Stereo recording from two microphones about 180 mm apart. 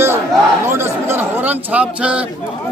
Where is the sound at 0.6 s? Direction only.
15° right (ahead or behind).